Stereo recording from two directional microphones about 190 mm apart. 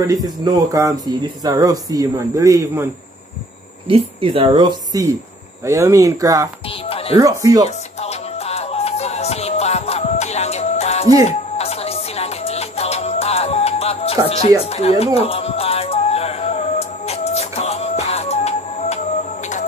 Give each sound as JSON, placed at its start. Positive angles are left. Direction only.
{"t": 0.0, "sound": "speech", "side_deg": -20}
{"t": 3.8, "sound": "a woman's voice", "side_deg": -30}
{"t": 6.9, "sound": "music", "side_deg": 30}
{"t": 7.2, "sound": "speech", "side_deg": -20}
{"t": 7.6, "sound": "music", "side_deg": 35}
{"t": 14.7, "sound": "speech", "side_deg": 35}
{"t": 15.1, "sound": "music", "side_deg": 30}